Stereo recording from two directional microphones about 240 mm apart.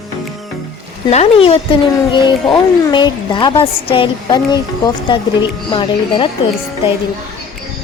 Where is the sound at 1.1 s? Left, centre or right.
Left.